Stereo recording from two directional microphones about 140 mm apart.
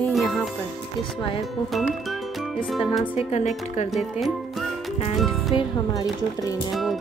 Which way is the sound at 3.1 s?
50° left (ahead or behind).